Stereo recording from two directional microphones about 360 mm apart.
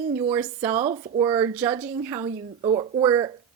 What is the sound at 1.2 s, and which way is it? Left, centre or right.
A woman's voice, centre.